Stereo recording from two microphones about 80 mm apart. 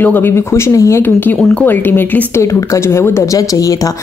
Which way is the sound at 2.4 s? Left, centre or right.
Left.